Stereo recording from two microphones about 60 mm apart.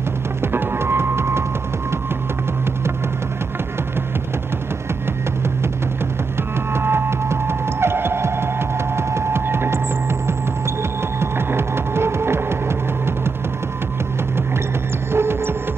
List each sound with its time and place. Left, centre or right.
0.4 s music: right
6.7 s music: right
15.1 s music: right